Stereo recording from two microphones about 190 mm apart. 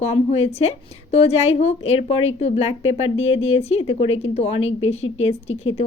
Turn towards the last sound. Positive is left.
turn(degrees=35)  # may be behind; listen again after turning